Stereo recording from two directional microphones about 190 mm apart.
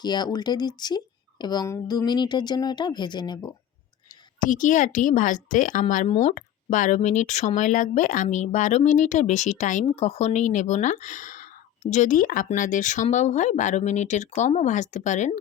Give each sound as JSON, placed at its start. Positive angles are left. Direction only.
{"t": 0.0, "sound": "speech", "side_deg": 20}
{"t": 4.4, "sound": "speech", "side_deg": 45}